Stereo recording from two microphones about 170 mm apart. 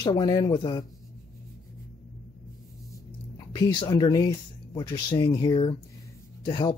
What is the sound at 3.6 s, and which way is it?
Speech, 20° left (ahead or behind).